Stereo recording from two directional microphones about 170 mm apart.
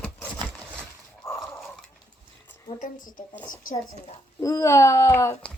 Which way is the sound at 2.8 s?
50° left (ahead or behind).